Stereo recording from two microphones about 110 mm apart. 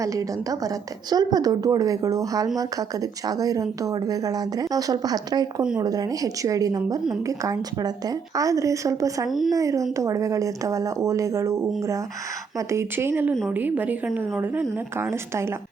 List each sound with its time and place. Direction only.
0.0 s a woman's voice: 30° right (ahead or behind)